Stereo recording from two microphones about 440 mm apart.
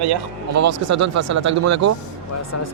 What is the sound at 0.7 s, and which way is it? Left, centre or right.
Speech, right.